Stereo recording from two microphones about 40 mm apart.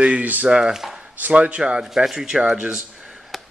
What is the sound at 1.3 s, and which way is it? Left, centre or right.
Speech, right.